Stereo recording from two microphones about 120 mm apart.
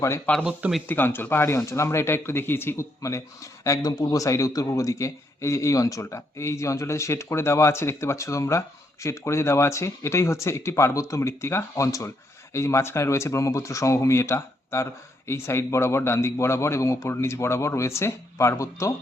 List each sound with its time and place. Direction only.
0.4 s speech: 5° right (ahead or behind)
0.9 s speech: 20° left (ahead or behind)